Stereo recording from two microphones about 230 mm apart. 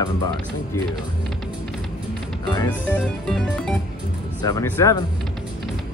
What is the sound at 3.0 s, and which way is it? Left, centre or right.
Music, centre.